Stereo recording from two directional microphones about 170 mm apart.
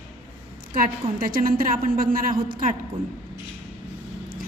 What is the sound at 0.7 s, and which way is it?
A woman's voice, 55° right (ahead or behind).